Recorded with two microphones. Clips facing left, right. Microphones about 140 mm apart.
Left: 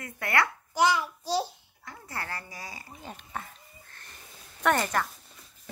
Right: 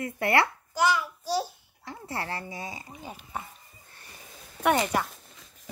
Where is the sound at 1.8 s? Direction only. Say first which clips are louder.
Right 4 dB; 25° right (ahead or behind).